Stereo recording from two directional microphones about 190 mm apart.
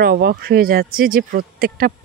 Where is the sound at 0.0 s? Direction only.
55° right (ahead or behind).